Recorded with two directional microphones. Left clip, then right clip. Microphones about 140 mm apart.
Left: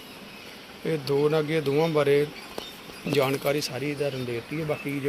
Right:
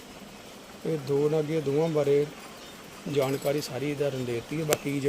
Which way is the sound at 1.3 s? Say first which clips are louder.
Left 2 dB; 10° right (ahead or behind).